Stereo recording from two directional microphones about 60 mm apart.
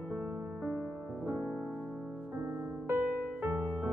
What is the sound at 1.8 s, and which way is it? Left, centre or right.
Music, centre.